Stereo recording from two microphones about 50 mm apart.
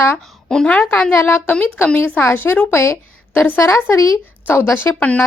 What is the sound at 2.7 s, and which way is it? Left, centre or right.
Speech, left.